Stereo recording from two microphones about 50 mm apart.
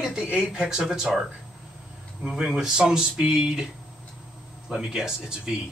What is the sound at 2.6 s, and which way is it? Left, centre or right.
Speech, centre.